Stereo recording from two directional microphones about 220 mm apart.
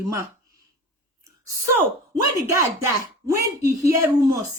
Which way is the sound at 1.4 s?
10° right (ahead or behind).